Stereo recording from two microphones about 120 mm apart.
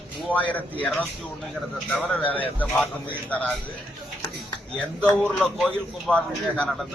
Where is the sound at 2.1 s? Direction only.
15° left (ahead or behind).